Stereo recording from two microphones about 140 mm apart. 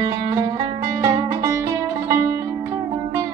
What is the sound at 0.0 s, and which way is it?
Music, 25° right (ahead or behind).